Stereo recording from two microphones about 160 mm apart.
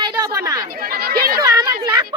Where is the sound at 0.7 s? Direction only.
65° right (ahead or behind).